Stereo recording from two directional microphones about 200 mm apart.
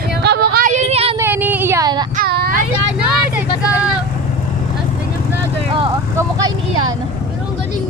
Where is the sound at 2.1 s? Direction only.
50° right (ahead or behind).